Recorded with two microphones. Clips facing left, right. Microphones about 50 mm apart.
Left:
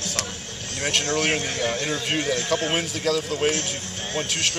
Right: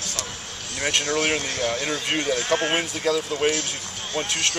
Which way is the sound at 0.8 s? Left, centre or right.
Centre.